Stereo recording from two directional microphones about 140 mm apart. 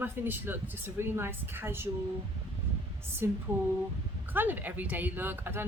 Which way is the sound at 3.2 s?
15° right (ahead or behind).